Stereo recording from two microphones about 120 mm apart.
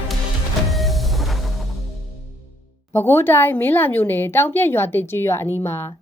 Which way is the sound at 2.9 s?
20° left (ahead or behind).